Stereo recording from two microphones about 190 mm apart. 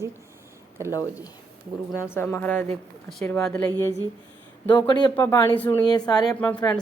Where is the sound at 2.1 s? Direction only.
10° left (ahead or behind).